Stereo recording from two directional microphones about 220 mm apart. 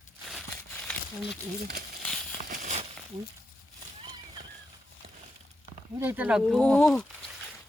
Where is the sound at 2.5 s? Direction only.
35° right (ahead or behind).